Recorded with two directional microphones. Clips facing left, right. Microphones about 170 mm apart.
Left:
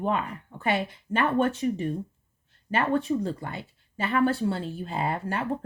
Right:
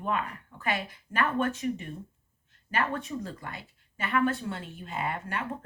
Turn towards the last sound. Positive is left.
turn(degrees=30)  # may be behind; listen again after turning